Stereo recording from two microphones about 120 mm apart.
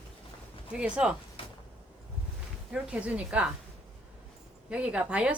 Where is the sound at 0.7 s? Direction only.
10° right (ahead or behind).